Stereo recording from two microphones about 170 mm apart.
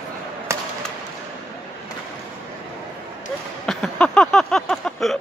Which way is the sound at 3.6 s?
5° left (ahead or behind).